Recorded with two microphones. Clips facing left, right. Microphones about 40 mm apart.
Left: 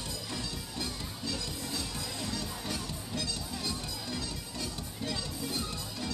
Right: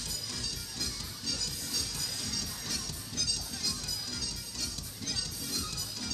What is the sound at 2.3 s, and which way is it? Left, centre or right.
Music, left.